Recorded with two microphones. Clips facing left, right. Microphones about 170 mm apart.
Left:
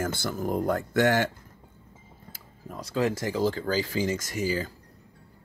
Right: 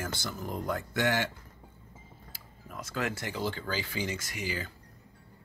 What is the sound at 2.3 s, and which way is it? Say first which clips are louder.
Speech: left 6 dB; 35° left (ahead or behind).